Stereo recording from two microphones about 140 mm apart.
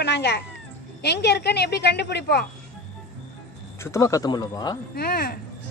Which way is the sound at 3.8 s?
20° left (ahead or behind).